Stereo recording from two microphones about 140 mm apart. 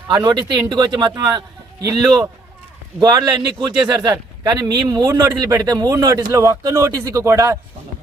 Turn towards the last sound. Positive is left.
turn(degrees=-20)  # may be behind; listen again after turning